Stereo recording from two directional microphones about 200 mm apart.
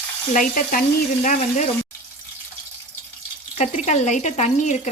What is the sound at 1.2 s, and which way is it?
Speech, 40° left (ahead or behind).